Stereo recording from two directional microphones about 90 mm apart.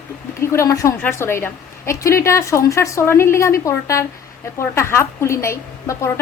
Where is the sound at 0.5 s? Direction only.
35° left (ahead or behind).